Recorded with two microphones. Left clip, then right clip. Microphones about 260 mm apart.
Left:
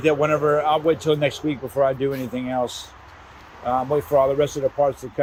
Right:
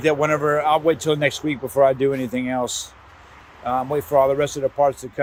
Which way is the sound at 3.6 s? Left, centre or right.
Centre.